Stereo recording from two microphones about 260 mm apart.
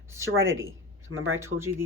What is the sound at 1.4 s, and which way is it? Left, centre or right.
Speech, centre.